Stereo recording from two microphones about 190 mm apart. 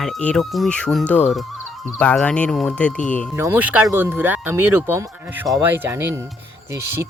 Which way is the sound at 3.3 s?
10° right (ahead or behind).